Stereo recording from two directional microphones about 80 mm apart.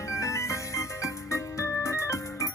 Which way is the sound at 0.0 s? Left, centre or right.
Left.